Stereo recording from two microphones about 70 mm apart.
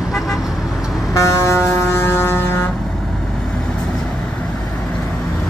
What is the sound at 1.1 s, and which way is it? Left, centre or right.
Vehicle, left.